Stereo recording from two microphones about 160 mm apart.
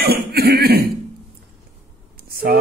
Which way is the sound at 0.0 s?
80° right.